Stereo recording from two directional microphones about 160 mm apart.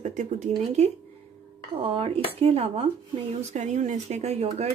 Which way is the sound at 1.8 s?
35° right (ahead or behind).